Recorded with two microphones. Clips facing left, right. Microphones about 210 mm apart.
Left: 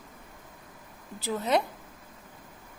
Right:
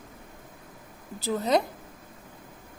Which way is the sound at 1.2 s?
40° right (ahead or behind).